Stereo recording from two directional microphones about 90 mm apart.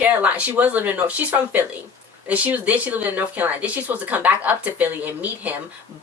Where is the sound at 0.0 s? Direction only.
15° right (ahead or behind).